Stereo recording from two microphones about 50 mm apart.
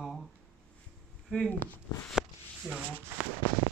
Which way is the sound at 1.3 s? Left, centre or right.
Left.